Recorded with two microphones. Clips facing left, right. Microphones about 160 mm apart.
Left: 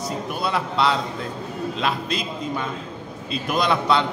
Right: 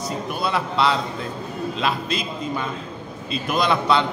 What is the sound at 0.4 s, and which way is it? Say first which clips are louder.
A man's voice: right 1 dB; centre (ahead or behind).